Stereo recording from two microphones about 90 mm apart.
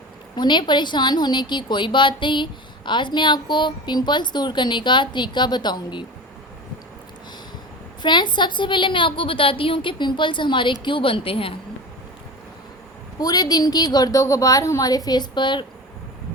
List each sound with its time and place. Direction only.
0.3 s a woman's voice: 60° left (ahead or behind)
8.0 s a woman's voice: 55° left (ahead or behind); by 11.5 s 90° left
13.1 s a woman's voice: 45° left (ahead or behind)
14.8 s a woman's voice: 45° left (ahead or behind)